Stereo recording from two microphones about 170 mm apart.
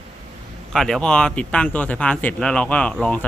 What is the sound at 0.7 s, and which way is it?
Speech, centre (ahead or behind).